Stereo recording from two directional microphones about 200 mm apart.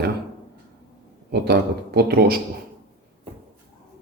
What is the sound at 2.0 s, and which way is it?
Speech, 50° right (ahead or behind).